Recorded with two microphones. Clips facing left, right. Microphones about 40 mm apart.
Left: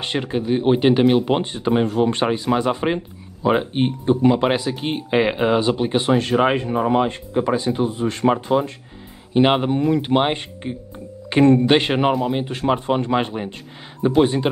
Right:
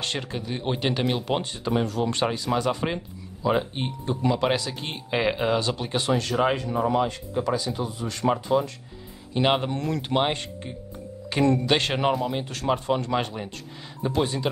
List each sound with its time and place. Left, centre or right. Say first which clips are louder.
0.0 s speech: left 7 dB; left